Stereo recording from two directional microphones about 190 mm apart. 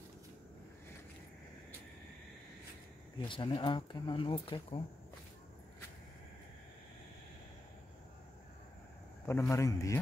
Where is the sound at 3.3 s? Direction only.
25° left (ahead or behind).